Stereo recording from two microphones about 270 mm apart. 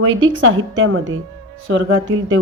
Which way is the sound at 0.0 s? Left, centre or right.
Right.